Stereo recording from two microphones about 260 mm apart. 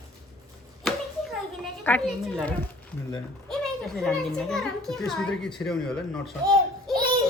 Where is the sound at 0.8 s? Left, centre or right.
Centre.